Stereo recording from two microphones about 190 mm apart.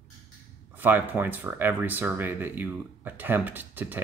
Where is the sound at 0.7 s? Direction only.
10° right (ahead or behind).